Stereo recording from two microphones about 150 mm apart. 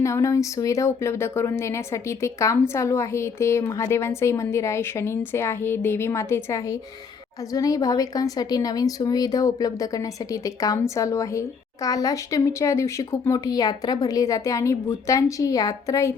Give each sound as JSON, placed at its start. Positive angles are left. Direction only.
{"t": 0.0, "sound": "a woman's voice", "side_deg": 20}